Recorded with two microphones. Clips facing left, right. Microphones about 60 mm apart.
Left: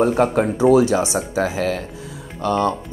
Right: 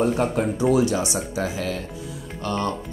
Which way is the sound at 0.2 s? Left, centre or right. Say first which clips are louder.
Left 5 dB; left.